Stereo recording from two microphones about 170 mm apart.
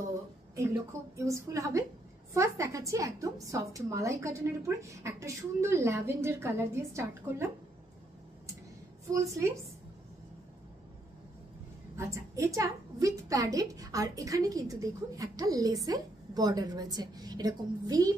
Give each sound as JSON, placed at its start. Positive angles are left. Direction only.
{"t": 1.1, "sound": "a woman's voice", "side_deg": -15}
{"t": 9.0, "sound": "a woman's voice", "side_deg": -15}
{"t": 12.0, "sound": "a woman's voice", "side_deg": -20}